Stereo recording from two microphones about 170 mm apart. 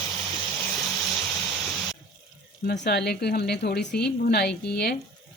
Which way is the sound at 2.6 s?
80° left.